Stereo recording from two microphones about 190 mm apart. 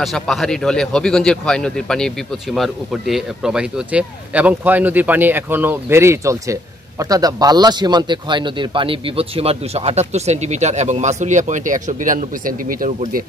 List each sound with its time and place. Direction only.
0.0 s speech: centre (ahead or behind); by 13.2 s 45° right (ahead or behind)